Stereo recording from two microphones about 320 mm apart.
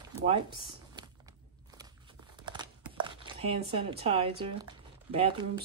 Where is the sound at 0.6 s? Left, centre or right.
Centre.